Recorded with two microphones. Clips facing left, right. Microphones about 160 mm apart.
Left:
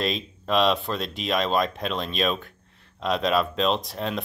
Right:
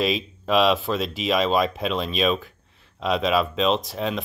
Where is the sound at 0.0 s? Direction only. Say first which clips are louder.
Right 4 dB; 5° right (ahead or behind).